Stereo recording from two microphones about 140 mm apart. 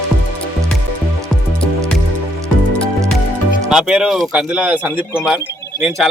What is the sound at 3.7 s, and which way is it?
Speech, 5° right (ahead or behind).